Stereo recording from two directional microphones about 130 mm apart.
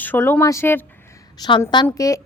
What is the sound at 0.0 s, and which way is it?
Speech, 15° left (ahead or behind).